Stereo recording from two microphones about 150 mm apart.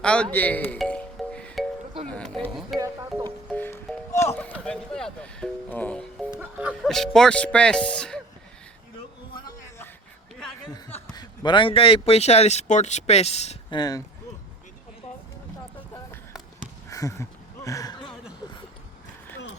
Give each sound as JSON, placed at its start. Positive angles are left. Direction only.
{"t": 0.0, "sound": "speech", "side_deg": 5}
{"t": 0.8, "sound": "music", "side_deg": 5}
{"t": 2.0, "sound": "speech", "side_deg": 5}
{"t": 2.7, "sound": "speech", "side_deg": -25}
{"t": 3.5, "sound": "music", "side_deg": 10}
{"t": 4.2, "sound": "speech", "side_deg": 15}
{"t": 6.3, "sound": "speech", "side_deg": -5}
{"t": 11.1, "sound": "speech", "side_deg": 30}
{"t": 13.7, "sound": "speech", "side_deg": 25}
{"t": 16.9, "sound": "a sound", "side_deg": 20}